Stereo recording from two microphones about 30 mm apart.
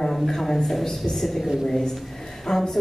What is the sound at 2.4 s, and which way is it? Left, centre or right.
Speech, centre.